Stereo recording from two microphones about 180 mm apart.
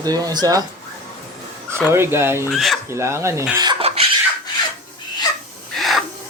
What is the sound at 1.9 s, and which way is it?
Speech, 15° right (ahead or behind).